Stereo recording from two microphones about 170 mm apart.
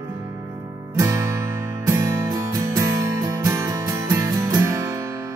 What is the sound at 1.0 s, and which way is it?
Guitar, 20° right (ahead or behind).